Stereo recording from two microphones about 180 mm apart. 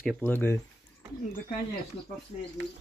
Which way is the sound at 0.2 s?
10° left (ahead or behind).